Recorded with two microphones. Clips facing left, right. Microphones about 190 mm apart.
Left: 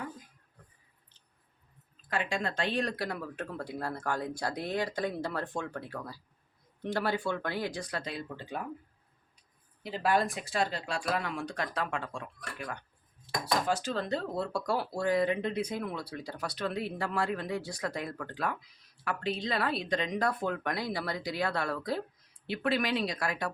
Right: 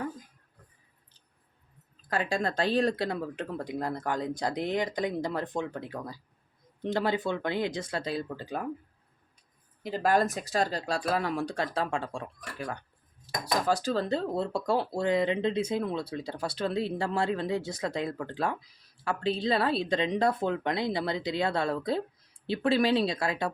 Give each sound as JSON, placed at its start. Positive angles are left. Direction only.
{"t": 2.0, "sound": "speech", "side_deg": -35}
{"t": 9.8, "sound": "speech", "side_deg": -45}